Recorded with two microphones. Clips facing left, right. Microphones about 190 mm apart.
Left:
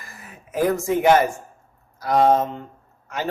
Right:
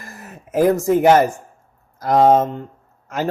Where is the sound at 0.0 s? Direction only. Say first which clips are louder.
Right 6 dB; 45° right (ahead or behind).